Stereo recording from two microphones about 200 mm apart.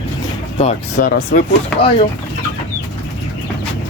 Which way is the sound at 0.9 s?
50° left (ahead or behind).